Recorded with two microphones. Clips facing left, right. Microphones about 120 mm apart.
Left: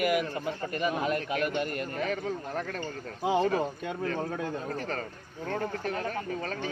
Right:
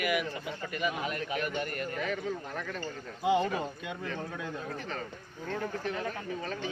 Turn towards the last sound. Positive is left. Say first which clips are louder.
# left 3 dB
turn(degrees=45)  # may be behind; listen again after turning